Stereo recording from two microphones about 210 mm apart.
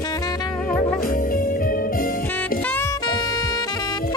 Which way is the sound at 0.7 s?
30° left (ahead or behind).